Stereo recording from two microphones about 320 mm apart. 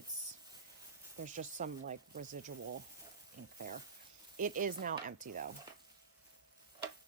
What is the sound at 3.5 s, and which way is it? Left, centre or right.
Speech, right.